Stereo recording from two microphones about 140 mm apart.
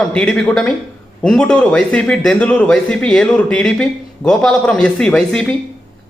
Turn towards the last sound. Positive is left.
turn(degrees=5)  # may be behind; listen again after turning